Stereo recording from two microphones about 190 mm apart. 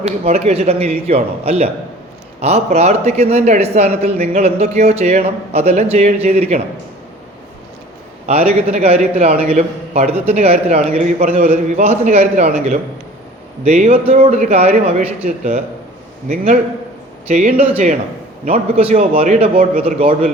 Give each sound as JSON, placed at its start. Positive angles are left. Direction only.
{"t": 0.0, "sound": "a man's voice", "side_deg": -35}
{"t": 8.3, "sound": "a man's voice", "side_deg": -35}